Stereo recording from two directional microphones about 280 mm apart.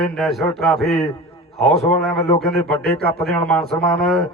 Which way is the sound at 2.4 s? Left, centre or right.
Centre.